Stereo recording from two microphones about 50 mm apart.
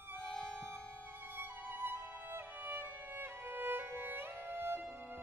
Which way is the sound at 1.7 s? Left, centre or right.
Right.